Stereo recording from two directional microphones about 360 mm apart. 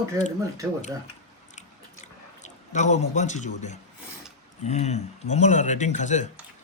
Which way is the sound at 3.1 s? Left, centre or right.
Centre.